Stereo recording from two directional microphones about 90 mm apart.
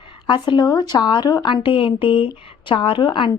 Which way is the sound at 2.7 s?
65° left (ahead or behind).